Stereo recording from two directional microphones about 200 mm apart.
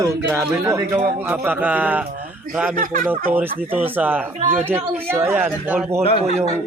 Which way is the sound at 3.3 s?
10° right (ahead or behind).